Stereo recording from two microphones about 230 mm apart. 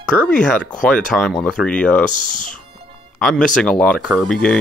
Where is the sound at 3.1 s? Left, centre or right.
Centre.